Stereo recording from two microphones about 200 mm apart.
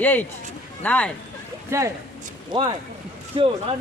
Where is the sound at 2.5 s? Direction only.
25° right (ahead or behind).